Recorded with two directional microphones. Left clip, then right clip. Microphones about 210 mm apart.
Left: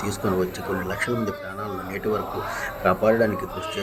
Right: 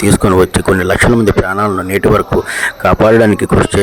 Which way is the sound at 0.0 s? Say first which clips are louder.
Right 15 dB; 50° right (ahead or behind).